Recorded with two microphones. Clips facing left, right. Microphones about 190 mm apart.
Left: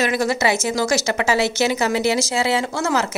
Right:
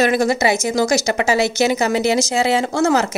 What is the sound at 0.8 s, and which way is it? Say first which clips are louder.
A woman's voice: right 4 dB; 15° right (ahead or behind).